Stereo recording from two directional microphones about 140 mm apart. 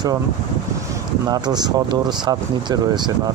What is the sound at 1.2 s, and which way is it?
Speech, 30° right (ahead or behind).